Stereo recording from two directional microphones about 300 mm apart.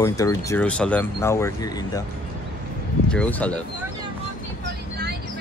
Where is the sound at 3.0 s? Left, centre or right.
Centre.